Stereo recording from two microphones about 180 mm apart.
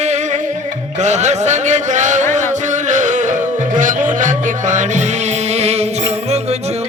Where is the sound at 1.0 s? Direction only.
40° right (ahead or behind).